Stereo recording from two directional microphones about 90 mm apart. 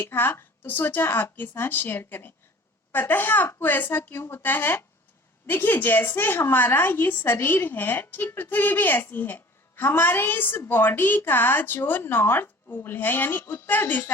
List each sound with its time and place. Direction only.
0.0 s a woman's voice: 25° left (ahead or behind)